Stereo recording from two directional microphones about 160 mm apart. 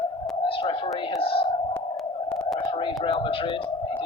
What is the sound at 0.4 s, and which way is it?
Radio, 35° left (ahead or behind).